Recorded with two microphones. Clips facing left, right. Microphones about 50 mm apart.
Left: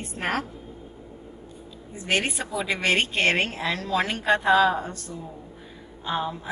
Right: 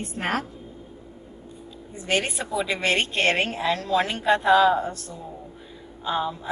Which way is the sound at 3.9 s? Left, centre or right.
Left.